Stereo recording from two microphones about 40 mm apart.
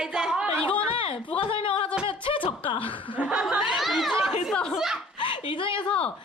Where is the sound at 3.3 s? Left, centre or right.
Centre.